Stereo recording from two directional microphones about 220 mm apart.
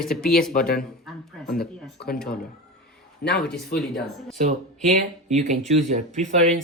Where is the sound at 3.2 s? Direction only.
50° left (ahead or behind).